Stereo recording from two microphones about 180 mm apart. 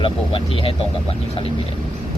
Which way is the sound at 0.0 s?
30° left (ahead or behind).